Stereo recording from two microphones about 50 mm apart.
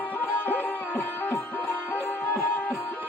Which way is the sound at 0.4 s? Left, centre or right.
Left.